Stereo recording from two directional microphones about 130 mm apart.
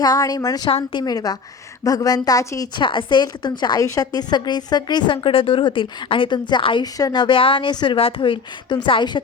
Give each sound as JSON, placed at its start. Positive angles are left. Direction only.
{"t": 0.0, "sound": "a woman's voice", "side_deg": 30}
{"t": 0.7, "sound": "a woman's voice", "side_deg": 50}
{"t": 1.0, "sound": "a woman's voice", "side_deg": 30}
{"t": 2.7, "sound": "a woman's voice", "side_deg": 40}